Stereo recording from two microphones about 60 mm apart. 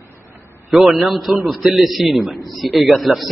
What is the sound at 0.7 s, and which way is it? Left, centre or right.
A man's voice, centre.